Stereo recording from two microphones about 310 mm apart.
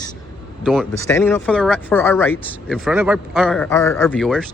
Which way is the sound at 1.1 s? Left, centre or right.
Centre.